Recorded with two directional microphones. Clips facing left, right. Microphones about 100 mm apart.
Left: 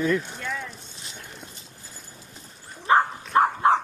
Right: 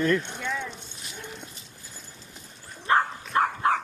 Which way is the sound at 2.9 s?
20° left (ahead or behind).